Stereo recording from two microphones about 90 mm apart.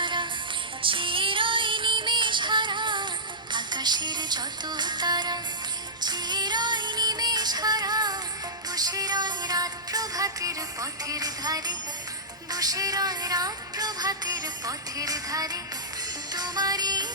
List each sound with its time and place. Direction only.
0.0 s music: 65° right (ahead or behind)